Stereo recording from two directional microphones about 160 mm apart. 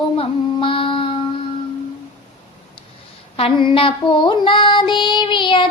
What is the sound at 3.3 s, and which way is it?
Child singing, 35° left (ahead or behind).